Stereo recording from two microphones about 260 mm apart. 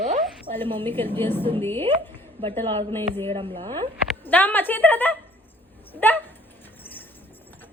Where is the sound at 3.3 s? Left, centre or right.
Centre.